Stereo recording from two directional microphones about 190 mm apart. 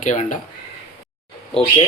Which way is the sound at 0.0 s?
40° left (ahead or behind).